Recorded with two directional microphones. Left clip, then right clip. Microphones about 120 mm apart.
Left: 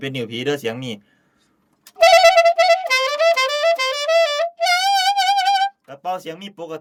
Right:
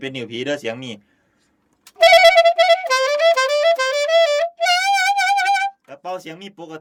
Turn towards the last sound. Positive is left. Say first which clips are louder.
# left 4 dB
turn(degrees=40)  # may be behind; listen again after turning